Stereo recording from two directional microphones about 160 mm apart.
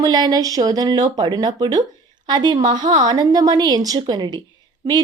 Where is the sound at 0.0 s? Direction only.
25° right (ahead or behind).